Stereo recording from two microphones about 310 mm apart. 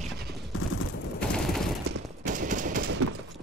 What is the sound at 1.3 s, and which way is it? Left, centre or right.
Fusillade, centre.